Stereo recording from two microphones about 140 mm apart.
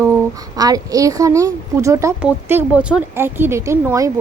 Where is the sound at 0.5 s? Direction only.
25° right (ahead or behind).